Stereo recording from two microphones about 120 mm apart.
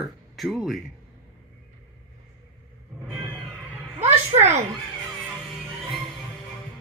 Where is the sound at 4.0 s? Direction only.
65° right (ahead or behind).